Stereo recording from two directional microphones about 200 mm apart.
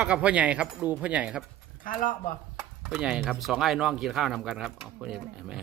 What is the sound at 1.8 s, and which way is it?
Speech, 45° left (ahead or behind).